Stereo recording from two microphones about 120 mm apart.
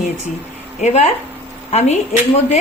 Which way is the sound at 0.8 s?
65° left (ahead or behind).